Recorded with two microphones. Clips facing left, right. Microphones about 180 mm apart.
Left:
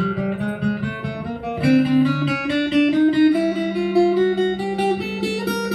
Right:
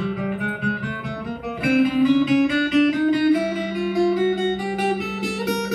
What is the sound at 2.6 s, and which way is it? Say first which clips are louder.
Music: left 2 dB; 25° left (ahead or behind).